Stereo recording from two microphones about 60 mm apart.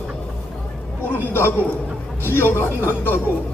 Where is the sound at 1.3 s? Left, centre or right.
Left.